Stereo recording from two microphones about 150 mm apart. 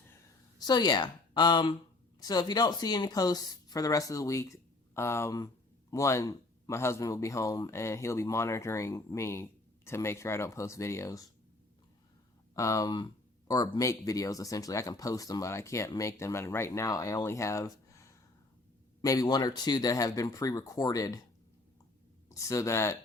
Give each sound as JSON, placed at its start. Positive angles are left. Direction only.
{"t": 0.6, "sound": "a man's voice", "side_deg": 25}
{"t": 12.5, "sound": "a man's voice", "side_deg": 20}
{"t": 22.4, "sound": "a man's voice", "side_deg": 20}